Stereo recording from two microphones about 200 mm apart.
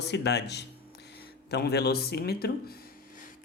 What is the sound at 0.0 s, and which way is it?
Speech, 55° left (ahead or behind).